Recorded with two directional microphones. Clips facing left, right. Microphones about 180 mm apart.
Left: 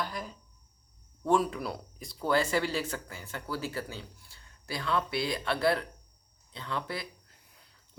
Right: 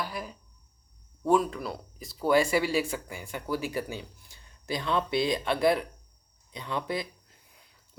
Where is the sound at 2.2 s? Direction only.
10° right (ahead or behind).